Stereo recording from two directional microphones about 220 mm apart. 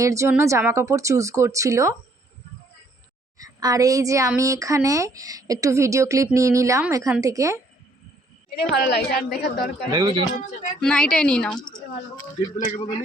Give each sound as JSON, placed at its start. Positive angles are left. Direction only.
{"t": 0.0, "sound": "a woman's voice", "side_deg": -15}
{"t": 3.3, "sound": "a woman's voice", "side_deg": -15}
{"t": 8.8, "sound": "a woman's voice", "side_deg": 45}
{"t": 9.9, "sound": "speech", "side_deg": -20}
{"t": 10.8, "sound": "a woman's voice", "side_deg": 5}
{"t": 12.5, "sound": "a man's voice", "side_deg": 35}